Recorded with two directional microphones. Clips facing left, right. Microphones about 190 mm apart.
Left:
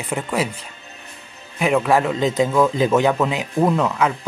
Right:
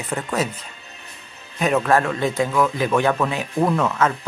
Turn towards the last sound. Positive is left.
turn(degrees=15)  # may be behind; listen again after turning